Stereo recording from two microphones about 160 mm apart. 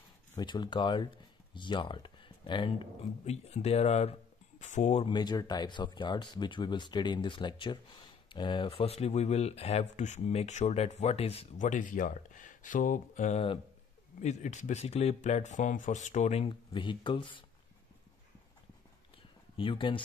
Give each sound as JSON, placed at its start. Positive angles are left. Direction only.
{"t": 0.4, "sound": "speech", "side_deg": 30}
{"t": 5.0, "sound": "speech", "side_deg": 25}
{"t": 19.5, "sound": "speech", "side_deg": 35}